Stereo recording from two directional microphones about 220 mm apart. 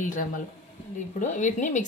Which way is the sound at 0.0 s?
35° left (ahead or behind).